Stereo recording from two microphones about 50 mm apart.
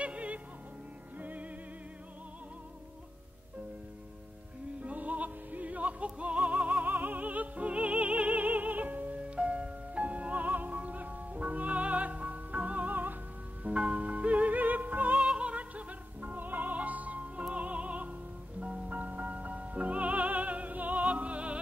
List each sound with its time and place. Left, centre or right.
0.0 s music: right
4.8 s music: right
6.9 s music: right
13.7 s music: right
15.1 s music: centre